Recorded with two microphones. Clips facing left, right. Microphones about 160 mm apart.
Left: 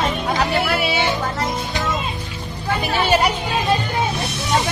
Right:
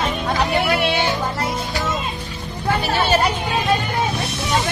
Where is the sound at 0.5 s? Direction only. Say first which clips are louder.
Right 1 dB; centre (ahead or behind).